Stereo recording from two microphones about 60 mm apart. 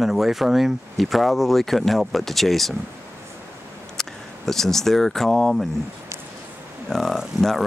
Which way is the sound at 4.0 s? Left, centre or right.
Centre.